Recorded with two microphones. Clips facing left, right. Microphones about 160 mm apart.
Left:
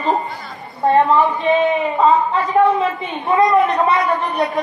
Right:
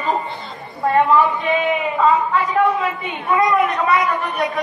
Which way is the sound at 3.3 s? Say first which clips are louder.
Left 3 dB; 25° left (ahead or behind).